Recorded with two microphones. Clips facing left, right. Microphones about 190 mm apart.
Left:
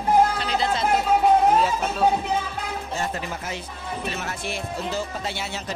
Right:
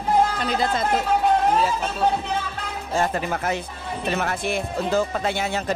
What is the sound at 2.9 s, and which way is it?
Speech, 75° right (ahead or behind).